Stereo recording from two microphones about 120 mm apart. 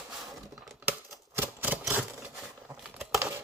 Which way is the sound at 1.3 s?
15° right (ahead or behind).